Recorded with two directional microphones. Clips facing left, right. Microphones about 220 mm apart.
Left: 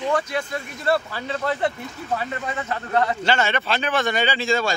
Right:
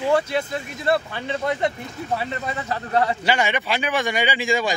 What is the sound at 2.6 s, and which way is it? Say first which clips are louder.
Speech: right 1 dB; 35° right (ahead or behind).